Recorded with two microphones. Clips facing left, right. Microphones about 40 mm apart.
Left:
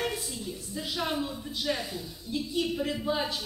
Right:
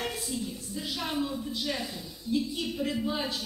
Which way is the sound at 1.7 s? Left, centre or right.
Centre.